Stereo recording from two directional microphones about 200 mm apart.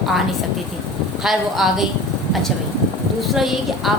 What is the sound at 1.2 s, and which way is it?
Speech, centre (ahead or behind).